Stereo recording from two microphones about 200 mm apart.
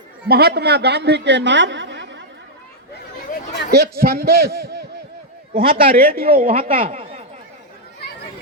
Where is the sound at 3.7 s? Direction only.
55° right (ahead or behind).